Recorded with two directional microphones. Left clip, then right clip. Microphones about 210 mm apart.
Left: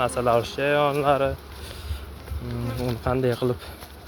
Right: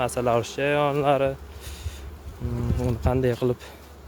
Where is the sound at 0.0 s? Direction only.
20° right (ahead or behind).